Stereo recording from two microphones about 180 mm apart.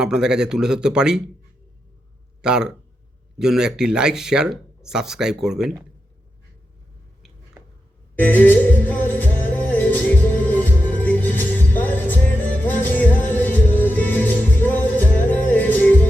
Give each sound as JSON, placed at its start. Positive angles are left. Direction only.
{"t": 0.0, "sound": "speech", "side_deg": -5}
{"t": 2.4, "sound": "speech", "side_deg": -5}
{"t": 8.2, "sound": "music", "side_deg": 10}